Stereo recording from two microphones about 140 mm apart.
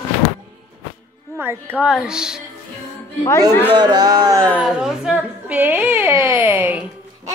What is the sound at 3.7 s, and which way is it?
Speech, 30° right (ahead or behind).